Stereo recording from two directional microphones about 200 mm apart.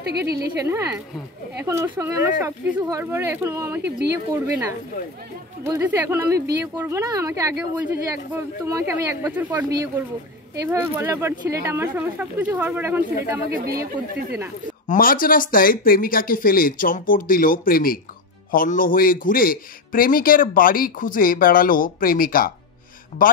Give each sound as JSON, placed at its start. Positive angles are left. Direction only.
{"t": 0.6, "sound": "speech", "side_deg": -15}
{"t": 5.6, "sound": "speech", "side_deg": -10}
{"t": 13.5, "sound": "speech", "side_deg": -50}
{"t": 14.9, "sound": "a man's voice", "side_deg": 45}